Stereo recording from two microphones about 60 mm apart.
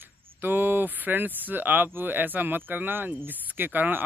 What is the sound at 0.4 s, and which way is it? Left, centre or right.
Speech, right.